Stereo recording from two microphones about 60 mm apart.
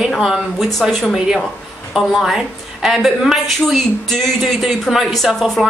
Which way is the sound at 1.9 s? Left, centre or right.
Centre.